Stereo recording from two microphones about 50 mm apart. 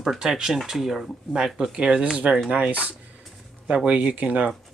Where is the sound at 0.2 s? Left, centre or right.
Centre.